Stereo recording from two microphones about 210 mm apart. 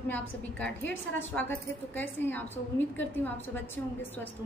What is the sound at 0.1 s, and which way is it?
A woman's voice, 5° left (ahead or behind).